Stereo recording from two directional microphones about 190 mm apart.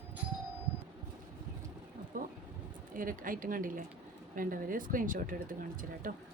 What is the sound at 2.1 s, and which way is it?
Vehicle, 45° right (ahead or behind).